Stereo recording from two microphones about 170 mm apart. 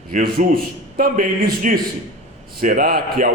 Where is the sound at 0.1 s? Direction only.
60° right (ahead or behind).